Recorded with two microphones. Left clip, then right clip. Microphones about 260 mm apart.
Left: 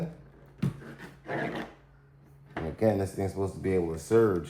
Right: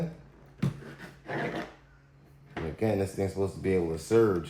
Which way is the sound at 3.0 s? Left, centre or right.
Centre.